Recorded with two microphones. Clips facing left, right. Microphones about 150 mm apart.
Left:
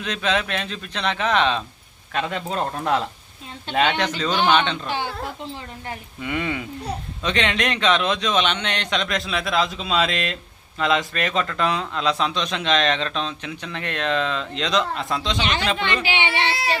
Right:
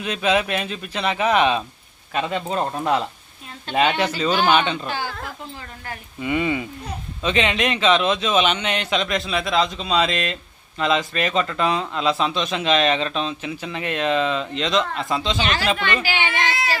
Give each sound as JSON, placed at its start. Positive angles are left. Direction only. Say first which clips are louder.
{"t": 0.0, "sound": "a man's voice", "louder": "right 3 dB", "side_deg": -10}
{"t": 4.9, "sound": "a woman's voice", "louder": "left 1 dB", "side_deg": 25}
{"t": 6.2, "sound": "a man's voice", "louder": "right 4 dB", "side_deg": -10}
{"t": 16.3, "sound": "a woman's voice", "louder": "even", "side_deg": 30}